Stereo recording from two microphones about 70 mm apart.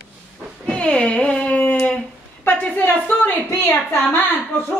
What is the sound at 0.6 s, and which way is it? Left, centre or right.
Speech, centre.